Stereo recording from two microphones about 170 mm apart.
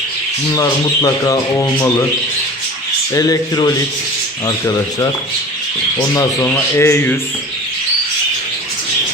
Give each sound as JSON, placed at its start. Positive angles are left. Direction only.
{"t": 0.5, "sound": "speech", "side_deg": 20}
{"t": 3.2, "sound": "speech", "side_deg": 20}